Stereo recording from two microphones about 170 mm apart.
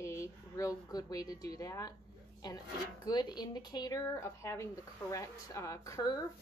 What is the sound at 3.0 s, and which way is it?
Speech, 25° left (ahead or behind).